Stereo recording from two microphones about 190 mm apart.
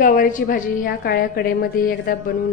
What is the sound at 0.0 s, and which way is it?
A woman's voice, 45° left (ahead or behind).